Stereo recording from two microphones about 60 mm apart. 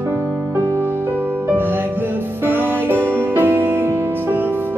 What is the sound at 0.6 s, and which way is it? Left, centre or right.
Music, right.